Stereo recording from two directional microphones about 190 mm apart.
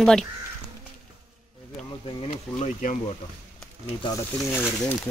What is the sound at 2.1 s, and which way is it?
Speech, 40° left (ahead or behind).